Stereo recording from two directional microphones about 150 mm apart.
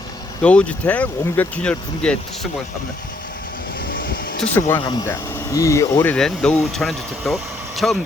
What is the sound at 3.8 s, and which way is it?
Vehicle, 70° left (ahead or behind).